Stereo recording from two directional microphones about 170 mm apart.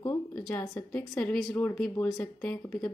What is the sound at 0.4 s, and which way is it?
A woman's voice, 5° left (ahead or behind).